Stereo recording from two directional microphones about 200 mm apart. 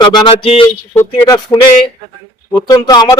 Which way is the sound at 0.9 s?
15° left (ahead or behind).